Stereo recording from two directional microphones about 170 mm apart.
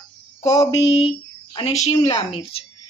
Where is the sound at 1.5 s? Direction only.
40° left (ahead or behind).